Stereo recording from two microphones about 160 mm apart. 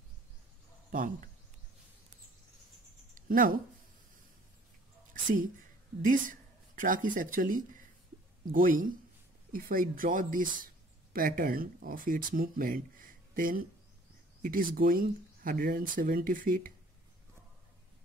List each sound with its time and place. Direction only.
0.9 s speech: 55° right (ahead or behind)
3.2 s speech: 55° right (ahead or behind)
6.0 s speech: 55° right (ahead or behind)